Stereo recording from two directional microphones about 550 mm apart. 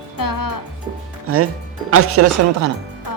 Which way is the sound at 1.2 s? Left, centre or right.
Right.